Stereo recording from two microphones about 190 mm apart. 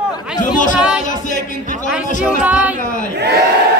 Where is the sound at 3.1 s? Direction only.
60° right (ahead or behind).